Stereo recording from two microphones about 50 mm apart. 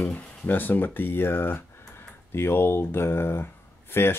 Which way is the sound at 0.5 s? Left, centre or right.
Left.